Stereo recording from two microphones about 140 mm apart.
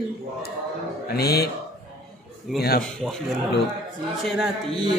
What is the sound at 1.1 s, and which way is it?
Speech, 90° left.